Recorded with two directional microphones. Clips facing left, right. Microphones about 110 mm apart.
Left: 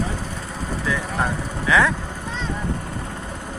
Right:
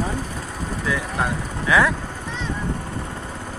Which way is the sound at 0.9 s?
5° right (ahead or behind).